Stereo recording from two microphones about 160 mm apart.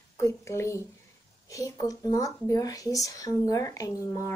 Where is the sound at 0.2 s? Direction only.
20° left (ahead or behind).